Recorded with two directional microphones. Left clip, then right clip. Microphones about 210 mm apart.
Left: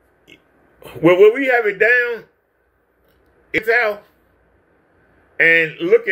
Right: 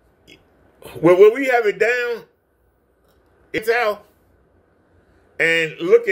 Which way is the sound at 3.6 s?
10° right (ahead or behind).